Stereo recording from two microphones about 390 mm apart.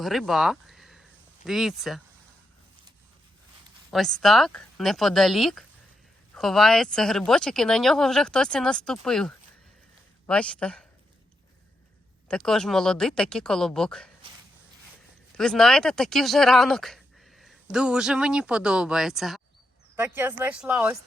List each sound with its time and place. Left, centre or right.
0.0 s a sound: centre
1.5 s speech: centre
3.9 s speech: centre
12.3 s speech: centre
15.4 s speech: centre